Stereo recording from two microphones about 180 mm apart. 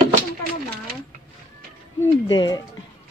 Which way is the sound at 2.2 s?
25° left (ahead or behind).